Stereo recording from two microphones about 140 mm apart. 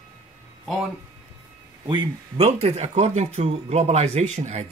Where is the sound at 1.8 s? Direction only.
35° right (ahead or behind).